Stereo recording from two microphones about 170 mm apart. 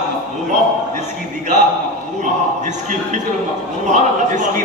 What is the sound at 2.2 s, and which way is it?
A man's voice, 45° right (ahead or behind).